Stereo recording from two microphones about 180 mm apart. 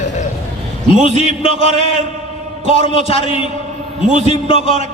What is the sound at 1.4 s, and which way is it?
A man's voice, 30° left (ahead or behind).